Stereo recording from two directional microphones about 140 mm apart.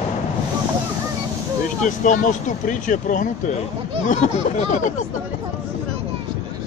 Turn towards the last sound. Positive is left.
turn(degrees=60)  # may be behind; listen again after turning